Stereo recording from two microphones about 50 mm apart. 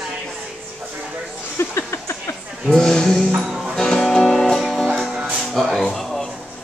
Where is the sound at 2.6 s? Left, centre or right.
Centre.